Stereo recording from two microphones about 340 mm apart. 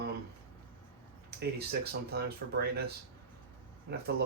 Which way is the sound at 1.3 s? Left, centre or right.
Right.